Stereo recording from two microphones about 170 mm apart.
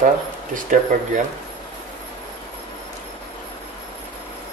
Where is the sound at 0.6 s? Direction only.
50° right (ahead or behind).